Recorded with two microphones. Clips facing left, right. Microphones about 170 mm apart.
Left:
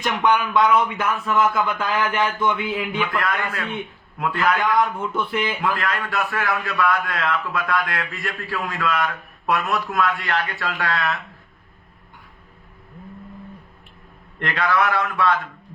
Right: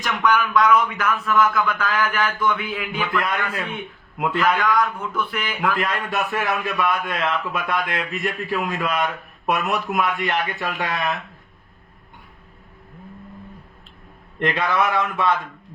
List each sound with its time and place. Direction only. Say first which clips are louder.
0.0 s speech: left 1 dB; 25° left (ahead or behind)
4.6 s speech: left 1 dB; 25° left (ahead or behind)
5.7 s a man's voice: right 1 dB; 20° right (ahead or behind)
14.3 s a man's voice: right 1 dB; 20° right (ahead or behind)